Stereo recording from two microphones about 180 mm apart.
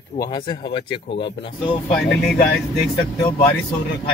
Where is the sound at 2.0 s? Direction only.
65° left (ahead or behind).